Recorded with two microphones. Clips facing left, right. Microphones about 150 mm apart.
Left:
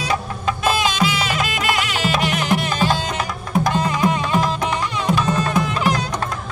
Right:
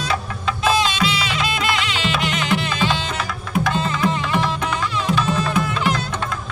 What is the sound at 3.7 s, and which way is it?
Music, 15° left (ahead or behind).